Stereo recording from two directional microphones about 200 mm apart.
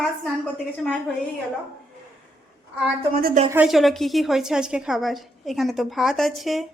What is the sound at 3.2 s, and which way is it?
Speech, 40° right (ahead or behind).